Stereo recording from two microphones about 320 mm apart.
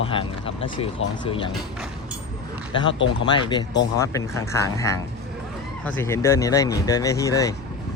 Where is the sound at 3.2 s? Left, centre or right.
Centre.